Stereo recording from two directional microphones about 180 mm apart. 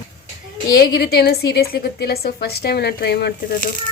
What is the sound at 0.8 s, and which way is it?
A woman's voice, 60° left (ahead or behind).